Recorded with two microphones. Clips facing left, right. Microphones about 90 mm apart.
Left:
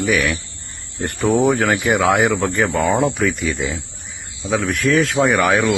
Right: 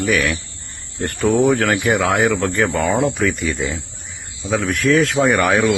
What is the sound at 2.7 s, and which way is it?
Speech, 15° left (ahead or behind).